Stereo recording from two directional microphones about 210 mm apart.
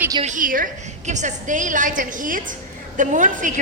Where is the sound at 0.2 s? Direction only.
35° right (ahead or behind).